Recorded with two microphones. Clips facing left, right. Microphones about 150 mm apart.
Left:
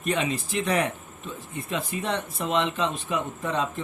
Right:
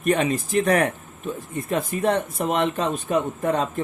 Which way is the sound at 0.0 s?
50° right (ahead or behind).